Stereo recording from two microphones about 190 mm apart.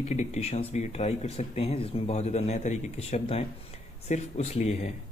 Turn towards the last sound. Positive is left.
turn(degrees=35)  # may be behind; listen again after turning